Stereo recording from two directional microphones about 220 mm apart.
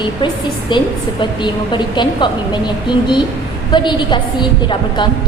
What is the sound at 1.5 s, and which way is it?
A woman's voice, 20° left (ahead or behind).